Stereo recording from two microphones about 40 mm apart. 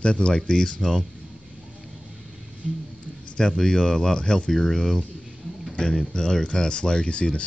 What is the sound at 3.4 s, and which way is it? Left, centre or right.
Speech, centre.